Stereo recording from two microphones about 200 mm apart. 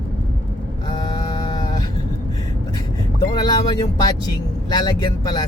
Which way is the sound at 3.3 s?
20° left (ahead or behind).